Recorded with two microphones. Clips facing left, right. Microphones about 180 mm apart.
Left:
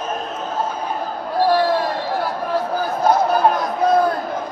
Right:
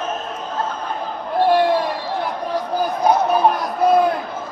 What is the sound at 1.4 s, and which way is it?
Basketball bounce, 20° right (ahead or behind).